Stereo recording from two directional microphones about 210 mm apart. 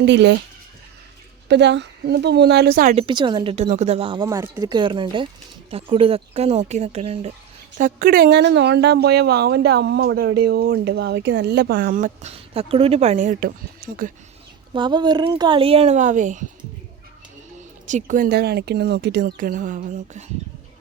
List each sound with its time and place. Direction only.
0.0 s speech: 55° right (ahead or behind)
1.5 s a woman's voice: 55° right (ahead or behind)
2.9 s speech: 25° right (ahead or behind)
7.8 s a woman's voice: 40° right (ahead or behind)
14.7 s speech: 20° right (ahead or behind)
17.8 s speech: 35° right (ahead or behind)